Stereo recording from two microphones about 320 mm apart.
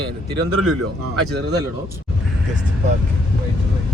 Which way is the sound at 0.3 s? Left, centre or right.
Right.